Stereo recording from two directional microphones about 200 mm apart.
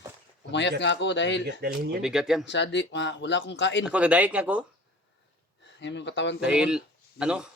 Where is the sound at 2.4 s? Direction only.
60° left (ahead or behind).